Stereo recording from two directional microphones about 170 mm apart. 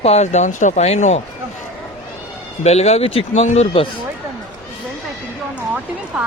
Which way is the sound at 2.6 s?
40° left (ahead or behind).